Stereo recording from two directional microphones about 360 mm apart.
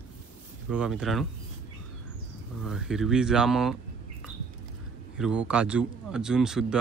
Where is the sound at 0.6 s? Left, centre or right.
Centre.